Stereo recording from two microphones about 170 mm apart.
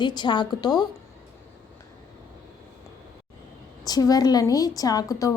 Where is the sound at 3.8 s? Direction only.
20° left (ahead or behind).